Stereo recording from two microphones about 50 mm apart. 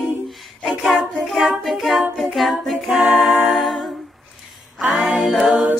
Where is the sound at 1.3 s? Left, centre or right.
Centre.